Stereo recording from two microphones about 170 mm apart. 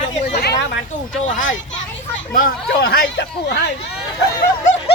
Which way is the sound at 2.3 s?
60° left (ahead or behind).